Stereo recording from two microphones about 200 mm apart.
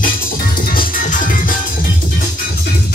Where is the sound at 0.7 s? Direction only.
40° left (ahead or behind).